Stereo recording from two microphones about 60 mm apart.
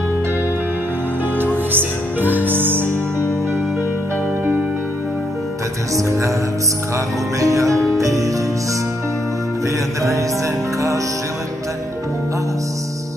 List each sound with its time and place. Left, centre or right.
1.4 s music: right
5.9 s music: right
7.3 s music: right